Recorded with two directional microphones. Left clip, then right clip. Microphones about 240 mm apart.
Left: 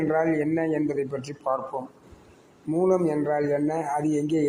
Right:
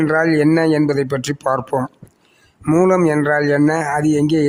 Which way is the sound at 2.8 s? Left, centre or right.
Right.